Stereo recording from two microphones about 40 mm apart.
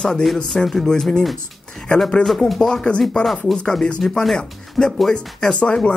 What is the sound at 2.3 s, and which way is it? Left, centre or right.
Speech, centre.